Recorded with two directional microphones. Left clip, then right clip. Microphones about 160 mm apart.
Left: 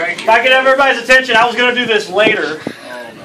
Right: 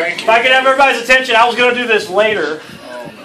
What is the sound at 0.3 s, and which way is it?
A man's voice, centre (ahead or behind).